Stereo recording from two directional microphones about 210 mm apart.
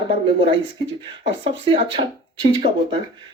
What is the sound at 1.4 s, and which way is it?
Speech, 25° right (ahead or behind).